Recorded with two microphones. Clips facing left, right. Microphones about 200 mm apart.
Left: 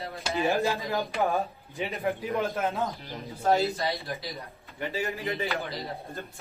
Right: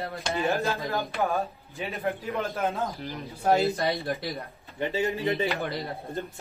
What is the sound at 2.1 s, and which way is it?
Speech, centre (ahead or behind).